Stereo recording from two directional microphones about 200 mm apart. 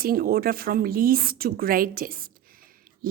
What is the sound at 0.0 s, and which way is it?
A woman's voice, 45° right (ahead or behind).